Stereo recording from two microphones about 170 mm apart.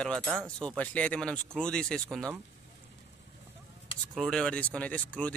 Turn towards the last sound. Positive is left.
turn(degrees=10)  # may be behind; listen again after turning